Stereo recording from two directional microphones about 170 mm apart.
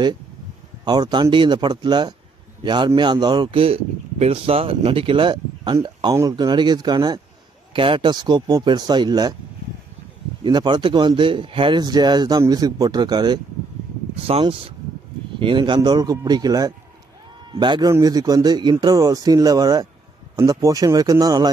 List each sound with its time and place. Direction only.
0.8 s speech: 25° right (ahead or behind)
10.4 s speech: 25° right (ahead or behind)